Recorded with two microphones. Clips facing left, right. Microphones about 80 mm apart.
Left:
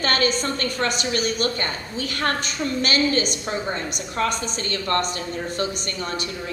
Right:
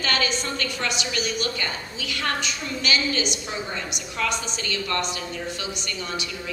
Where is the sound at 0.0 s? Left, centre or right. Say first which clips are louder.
Left 4 dB; left.